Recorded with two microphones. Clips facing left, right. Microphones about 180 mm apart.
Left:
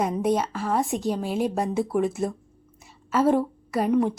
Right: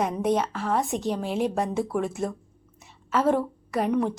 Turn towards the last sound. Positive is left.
turn(degrees=5)  # may be behind; listen again after turning